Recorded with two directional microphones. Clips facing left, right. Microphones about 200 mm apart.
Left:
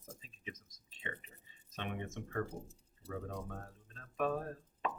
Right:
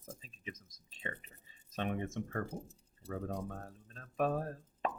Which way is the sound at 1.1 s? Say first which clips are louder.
Right 2 dB; 35° right (ahead or behind).